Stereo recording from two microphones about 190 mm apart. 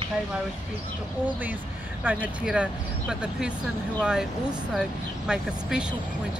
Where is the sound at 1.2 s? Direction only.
10° right (ahead or behind).